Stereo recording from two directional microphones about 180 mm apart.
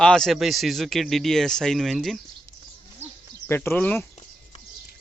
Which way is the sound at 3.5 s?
10° left (ahead or behind).